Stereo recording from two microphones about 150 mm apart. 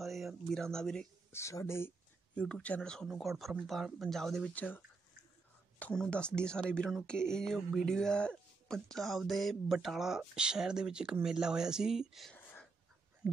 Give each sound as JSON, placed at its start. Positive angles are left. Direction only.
{"t": 0.0, "sound": "a sound", "side_deg": 0}
{"t": 1.3, "sound": "speech", "side_deg": 20}
{"t": 2.3, "sound": "speech", "side_deg": 5}